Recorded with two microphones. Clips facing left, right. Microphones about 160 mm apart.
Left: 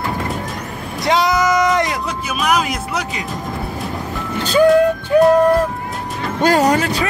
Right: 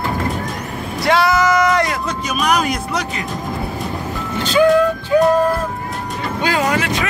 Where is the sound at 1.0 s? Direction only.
20° left (ahead or behind).